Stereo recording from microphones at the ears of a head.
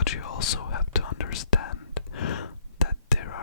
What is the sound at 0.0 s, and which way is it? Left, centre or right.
Whispering, left.